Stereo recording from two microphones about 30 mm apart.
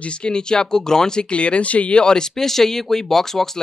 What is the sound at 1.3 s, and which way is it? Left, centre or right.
Speech, left.